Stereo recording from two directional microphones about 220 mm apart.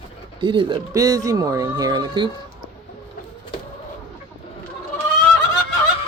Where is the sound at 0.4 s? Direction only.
20° right (ahead or behind).